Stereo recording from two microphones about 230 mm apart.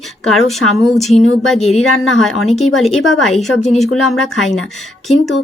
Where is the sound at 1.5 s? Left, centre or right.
Left.